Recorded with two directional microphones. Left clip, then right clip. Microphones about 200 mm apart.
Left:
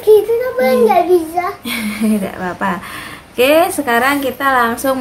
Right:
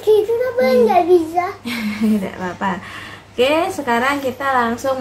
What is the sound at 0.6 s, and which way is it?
A child's voice, 5° left (ahead or behind).